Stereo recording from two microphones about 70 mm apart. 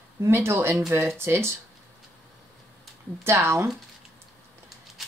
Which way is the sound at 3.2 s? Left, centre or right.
Right.